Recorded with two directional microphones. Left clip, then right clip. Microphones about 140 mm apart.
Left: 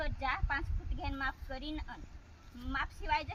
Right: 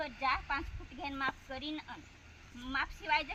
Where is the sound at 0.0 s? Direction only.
15° left (ahead or behind).